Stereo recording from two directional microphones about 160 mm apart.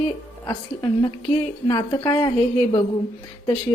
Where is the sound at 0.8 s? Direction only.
25° left (ahead or behind).